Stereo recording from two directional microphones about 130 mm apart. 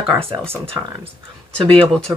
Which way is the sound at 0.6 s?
40° right (ahead or behind).